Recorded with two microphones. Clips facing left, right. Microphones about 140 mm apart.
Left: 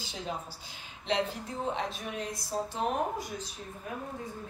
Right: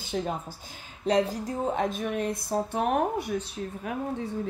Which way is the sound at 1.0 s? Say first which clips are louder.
Right 7 dB; 40° right (ahead or behind).